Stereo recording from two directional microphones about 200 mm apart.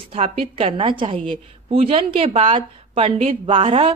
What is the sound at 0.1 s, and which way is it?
A woman's voice, 30° right (ahead or behind).